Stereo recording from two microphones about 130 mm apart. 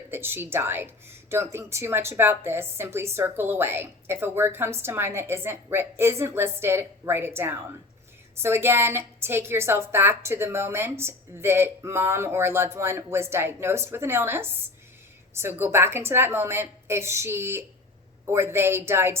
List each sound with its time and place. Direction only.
0.1 s a woman's voice: 15° right (ahead or behind)